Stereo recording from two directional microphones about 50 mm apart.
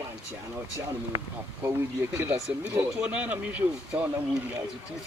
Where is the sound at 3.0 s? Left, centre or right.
Right.